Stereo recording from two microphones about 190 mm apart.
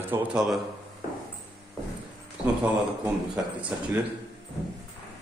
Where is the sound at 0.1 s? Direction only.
5° right (ahead or behind).